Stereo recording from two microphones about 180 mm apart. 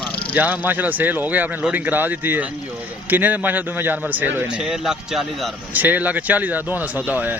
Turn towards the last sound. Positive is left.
turn(degrees=-10)  # may be behind; listen again after turning